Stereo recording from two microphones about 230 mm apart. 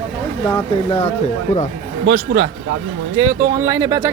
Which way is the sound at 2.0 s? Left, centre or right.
Right.